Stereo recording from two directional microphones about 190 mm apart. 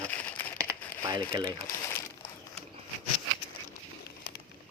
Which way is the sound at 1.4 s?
15° left (ahead or behind).